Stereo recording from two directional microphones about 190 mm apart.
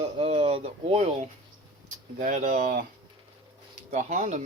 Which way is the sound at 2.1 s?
40° right (ahead or behind).